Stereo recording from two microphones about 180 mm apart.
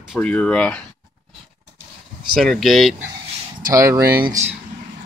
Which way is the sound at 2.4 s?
Centre (ahead or behind).